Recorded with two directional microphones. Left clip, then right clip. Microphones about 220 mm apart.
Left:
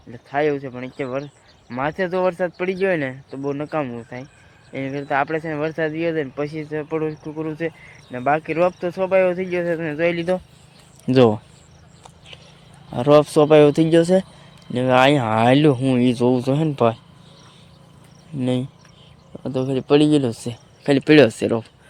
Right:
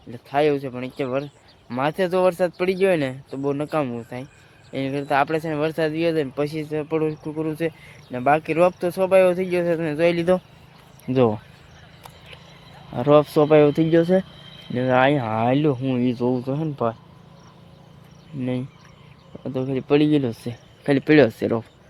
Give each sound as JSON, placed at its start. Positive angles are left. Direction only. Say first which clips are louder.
{"t": 0.1, "sound": "speech", "louder": "right 1 dB", "side_deg": -10}
{"t": 10.2, "sound": "speech", "louder": "right 2 dB", "side_deg": -25}
{"t": 11.0, "sound": "speech", "louder": "left 4 dB", "side_deg": 20}
{"t": 12.9, "sound": "speech", "louder": "left 2 dB", "side_deg": 10}
{"t": 18.3, "sound": "speech", "louder": "left 5 dB", "side_deg": 20}